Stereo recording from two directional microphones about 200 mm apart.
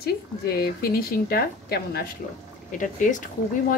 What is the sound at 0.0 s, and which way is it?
Speech, 50° left (ahead or behind).